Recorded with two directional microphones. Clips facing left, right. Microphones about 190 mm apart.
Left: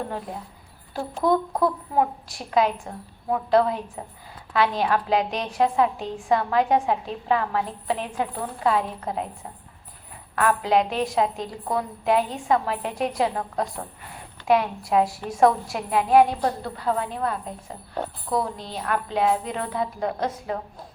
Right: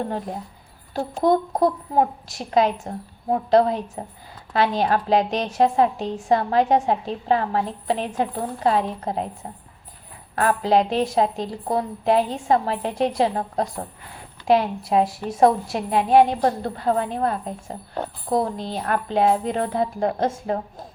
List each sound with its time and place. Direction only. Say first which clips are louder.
0.9 s a woman's voice: right 3 dB; 30° right (ahead or behind)
1.3 s a woman's voice: right 2 dB; 40° right (ahead or behind); by 16.4 s 25° right (ahead or behind)
16.4 s a woman's voice: right 4 dB; 45° right (ahead or behind)